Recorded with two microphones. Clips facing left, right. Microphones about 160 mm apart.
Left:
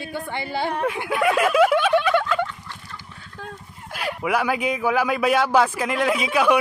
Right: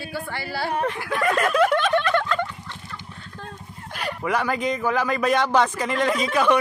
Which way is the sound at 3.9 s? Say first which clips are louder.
Left 2 dB; 5° left (ahead or behind).